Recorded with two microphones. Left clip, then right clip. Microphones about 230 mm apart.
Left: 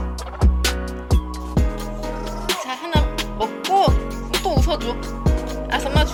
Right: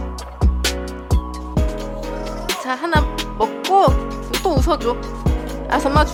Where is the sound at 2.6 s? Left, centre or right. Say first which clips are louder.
Right 5 dB; centre.